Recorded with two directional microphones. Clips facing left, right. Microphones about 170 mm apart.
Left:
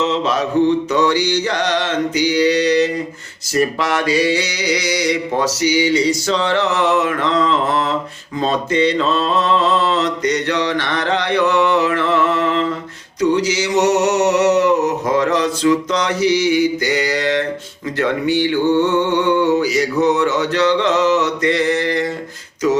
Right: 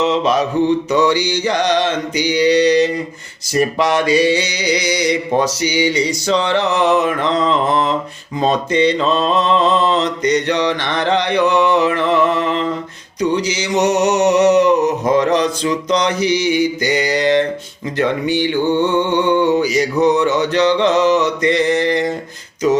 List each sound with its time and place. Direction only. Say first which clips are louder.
0.0 s mantra: right 3 dB; 15° right (ahead or behind)